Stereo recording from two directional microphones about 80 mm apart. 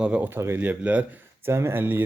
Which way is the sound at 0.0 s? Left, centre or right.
Right.